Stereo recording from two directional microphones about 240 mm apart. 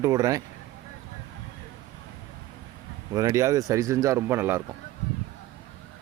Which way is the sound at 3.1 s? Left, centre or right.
Centre.